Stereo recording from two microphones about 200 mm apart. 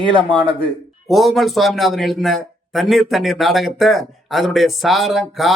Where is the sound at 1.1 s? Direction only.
Centre (ahead or behind).